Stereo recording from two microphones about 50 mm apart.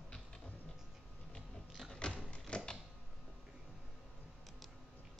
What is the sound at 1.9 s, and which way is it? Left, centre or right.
Music, centre.